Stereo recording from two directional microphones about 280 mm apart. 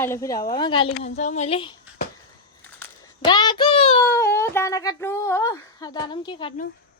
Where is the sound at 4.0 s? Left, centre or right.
Centre.